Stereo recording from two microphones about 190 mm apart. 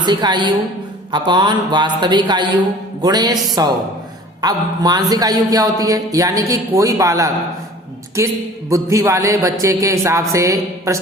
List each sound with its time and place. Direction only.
0.0 s a man's voice: 25° right (ahead or behind)